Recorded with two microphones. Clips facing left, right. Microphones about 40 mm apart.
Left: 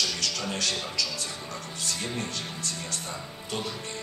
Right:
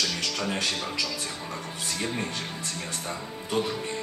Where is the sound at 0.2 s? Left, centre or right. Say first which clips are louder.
Right 2 dB; right.